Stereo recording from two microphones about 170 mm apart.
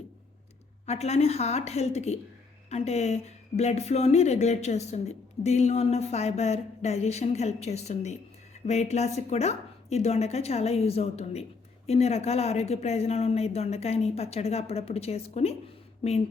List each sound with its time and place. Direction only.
0.9 s speech: 40° left (ahead or behind)